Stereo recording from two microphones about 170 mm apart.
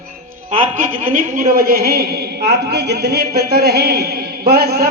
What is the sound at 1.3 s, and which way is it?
Speech, 55° right (ahead or behind).